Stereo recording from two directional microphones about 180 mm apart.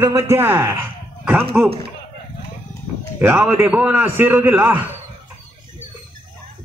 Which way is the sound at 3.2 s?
15° right (ahead or behind).